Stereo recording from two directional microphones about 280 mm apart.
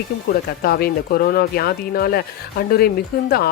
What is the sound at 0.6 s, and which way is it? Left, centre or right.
Speech, left.